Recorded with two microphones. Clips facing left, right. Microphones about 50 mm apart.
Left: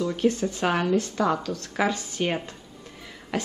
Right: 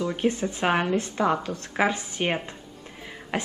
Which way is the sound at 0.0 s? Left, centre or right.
Right.